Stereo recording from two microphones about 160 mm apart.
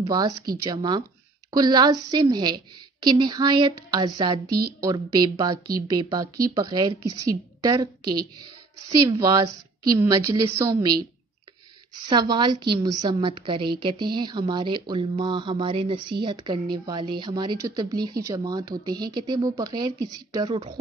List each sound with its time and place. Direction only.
0.7 s a woman's voice: 25° right (ahead or behind)
4.5 s a woman's voice: 75° right (ahead or behind)
4.7 s a woman's voice: 25° right (ahead or behind)
12.1 s a woman's voice: 25° right (ahead or behind)